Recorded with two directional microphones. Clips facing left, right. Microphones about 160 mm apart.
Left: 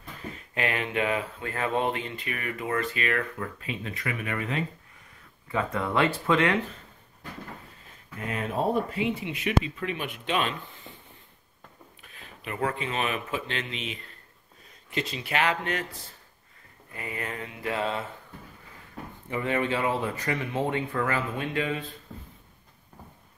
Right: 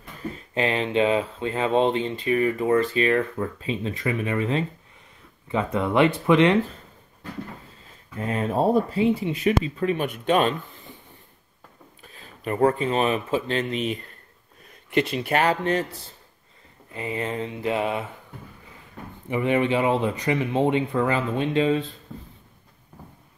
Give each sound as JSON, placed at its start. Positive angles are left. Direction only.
{"t": 0.6, "sound": "speech", "side_deg": -25}
{"t": 8.2, "sound": "speech", "side_deg": -35}
{"t": 12.0, "sound": "speech", "side_deg": -35}
{"t": 14.9, "sound": "speech", "side_deg": -60}
{"t": 15.3, "sound": "speech", "side_deg": -35}
{"t": 16.9, "sound": "speech", "side_deg": -25}
{"t": 19.2, "sound": "speech", "side_deg": -20}